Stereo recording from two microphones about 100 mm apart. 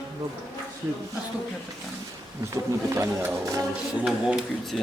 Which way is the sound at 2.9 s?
30° right (ahead or behind).